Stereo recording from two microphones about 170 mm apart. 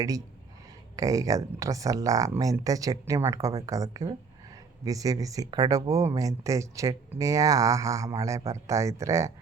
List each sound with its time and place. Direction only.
0.9 s speech: 20° right (ahead or behind)